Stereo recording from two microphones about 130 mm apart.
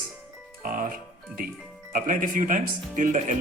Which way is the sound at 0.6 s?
90° right.